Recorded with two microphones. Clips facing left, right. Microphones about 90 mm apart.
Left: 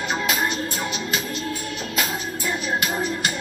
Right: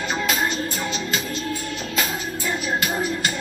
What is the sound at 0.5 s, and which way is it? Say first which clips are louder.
Music: right 1 dB; 35° left (ahead or behind).